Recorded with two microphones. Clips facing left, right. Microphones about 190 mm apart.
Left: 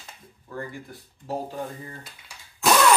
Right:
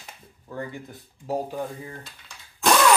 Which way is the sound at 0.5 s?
20° right (ahead or behind).